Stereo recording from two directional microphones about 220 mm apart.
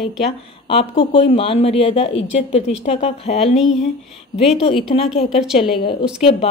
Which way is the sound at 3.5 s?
Centre (ahead or behind).